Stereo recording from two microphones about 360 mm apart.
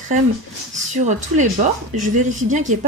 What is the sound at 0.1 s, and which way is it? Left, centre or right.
Speech, right.